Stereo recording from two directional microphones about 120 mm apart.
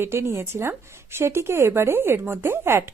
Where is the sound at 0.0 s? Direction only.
20° right (ahead or behind).